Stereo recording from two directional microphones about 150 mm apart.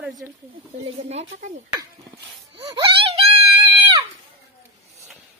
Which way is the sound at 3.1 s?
40° right (ahead or behind).